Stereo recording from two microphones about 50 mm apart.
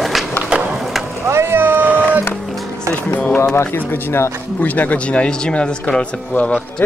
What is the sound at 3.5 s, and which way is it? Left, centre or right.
Speech, left.